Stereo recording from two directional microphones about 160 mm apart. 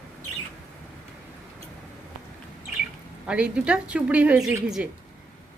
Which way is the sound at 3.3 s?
5° right (ahead or behind).